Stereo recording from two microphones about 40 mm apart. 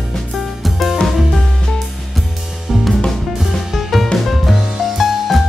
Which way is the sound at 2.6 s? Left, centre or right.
Centre.